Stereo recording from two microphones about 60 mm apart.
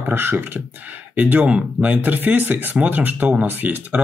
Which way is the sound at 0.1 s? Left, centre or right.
Right.